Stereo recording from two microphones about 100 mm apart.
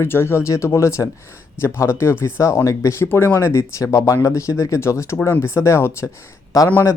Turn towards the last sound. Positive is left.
turn(degrees=30)  # may be behind; listen again after turning